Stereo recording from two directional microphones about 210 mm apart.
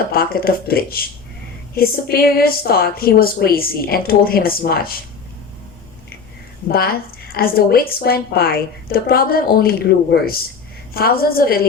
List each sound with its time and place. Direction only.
0.1 s a woman's voice: 45° left (ahead or behind)
6.7 s a woman's voice: 45° left (ahead or behind)